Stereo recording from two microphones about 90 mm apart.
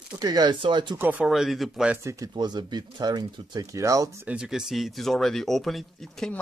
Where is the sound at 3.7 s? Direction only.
40° right (ahead or behind).